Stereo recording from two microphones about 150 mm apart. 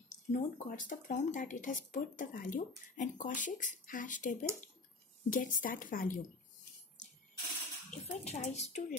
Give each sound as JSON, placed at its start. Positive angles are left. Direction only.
{"t": 0.1, "sound": "speech", "side_deg": 60}
{"t": 7.9, "sound": "a woman's voice", "side_deg": 50}